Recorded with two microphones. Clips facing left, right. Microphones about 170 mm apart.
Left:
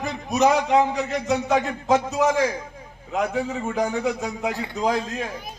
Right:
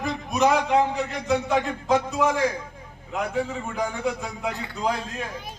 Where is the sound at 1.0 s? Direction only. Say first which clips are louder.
Left 2 dB; 45° left (ahead or behind).